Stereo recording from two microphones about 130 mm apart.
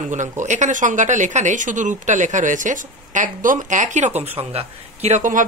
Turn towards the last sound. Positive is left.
turn(degrees=-55)  # may be behind; listen again after turning